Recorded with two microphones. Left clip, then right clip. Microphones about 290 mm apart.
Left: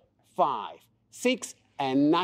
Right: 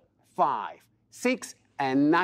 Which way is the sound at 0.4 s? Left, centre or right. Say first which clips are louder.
Right 1 dB; right.